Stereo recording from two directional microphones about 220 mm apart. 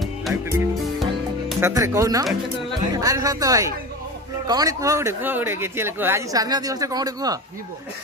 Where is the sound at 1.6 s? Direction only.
15° right (ahead or behind).